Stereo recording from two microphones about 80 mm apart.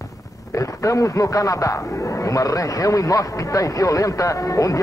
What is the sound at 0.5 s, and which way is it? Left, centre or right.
A man's voice, left.